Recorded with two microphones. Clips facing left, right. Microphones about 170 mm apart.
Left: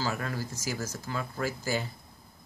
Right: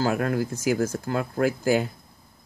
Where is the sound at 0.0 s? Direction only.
60° right (ahead or behind).